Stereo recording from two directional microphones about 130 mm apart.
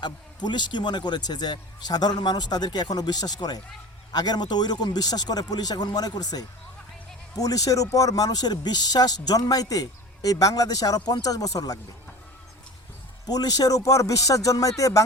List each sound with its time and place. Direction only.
0.0 s speech: 35° left (ahead or behind)
13.2 s speech: 30° left (ahead or behind)